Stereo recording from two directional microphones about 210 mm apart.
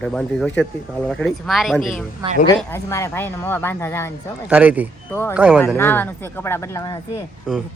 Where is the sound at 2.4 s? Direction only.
15° left (ahead or behind).